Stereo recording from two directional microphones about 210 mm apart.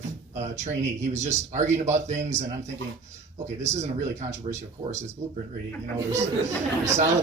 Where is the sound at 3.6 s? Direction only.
35° right (ahead or behind).